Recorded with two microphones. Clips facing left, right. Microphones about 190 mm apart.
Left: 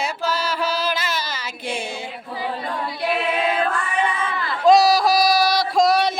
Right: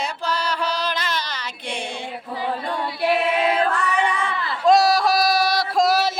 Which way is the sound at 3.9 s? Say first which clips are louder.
Right 1 dB; 75° right (ahead or behind).